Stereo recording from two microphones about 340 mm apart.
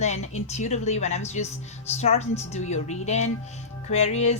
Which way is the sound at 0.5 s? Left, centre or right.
Centre.